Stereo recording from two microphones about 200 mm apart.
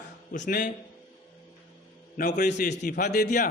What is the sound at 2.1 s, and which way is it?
A man's voice, 40° left (ahead or behind).